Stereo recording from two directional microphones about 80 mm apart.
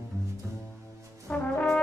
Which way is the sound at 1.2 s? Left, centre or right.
Centre.